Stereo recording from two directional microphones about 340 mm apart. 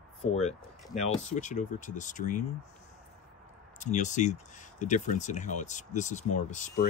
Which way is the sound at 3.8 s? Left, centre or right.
Left.